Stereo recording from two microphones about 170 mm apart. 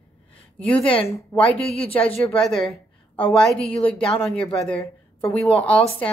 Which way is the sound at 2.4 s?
Centre (ahead or behind).